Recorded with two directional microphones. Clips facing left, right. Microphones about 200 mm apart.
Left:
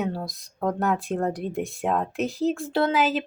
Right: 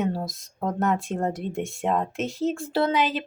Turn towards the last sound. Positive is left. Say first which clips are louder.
# left 1 dB
turn(degrees=0)  # may be behind; listen again after turning